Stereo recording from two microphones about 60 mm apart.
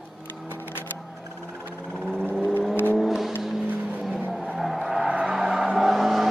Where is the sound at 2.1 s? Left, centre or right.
Centre.